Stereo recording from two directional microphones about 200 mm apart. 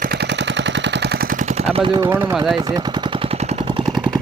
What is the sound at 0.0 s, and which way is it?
Gunshot, 55° right (ahead or behind).